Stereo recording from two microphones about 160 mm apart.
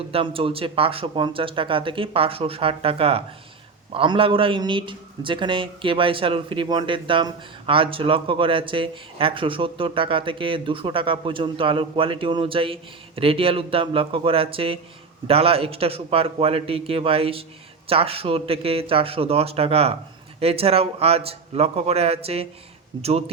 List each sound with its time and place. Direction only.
0.1 s a man's voice: 35° right (ahead or behind)